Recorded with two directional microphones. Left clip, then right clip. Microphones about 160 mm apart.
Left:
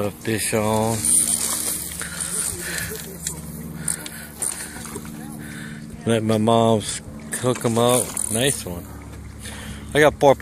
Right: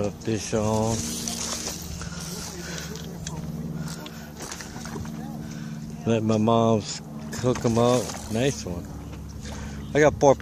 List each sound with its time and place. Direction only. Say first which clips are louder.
0.0 s speech: left 4 dB; 5° left (ahead or behind)
6.0 s speech: left 4 dB; 5° left (ahead or behind)
9.9 s speech: left 3 dB; 5° right (ahead or behind)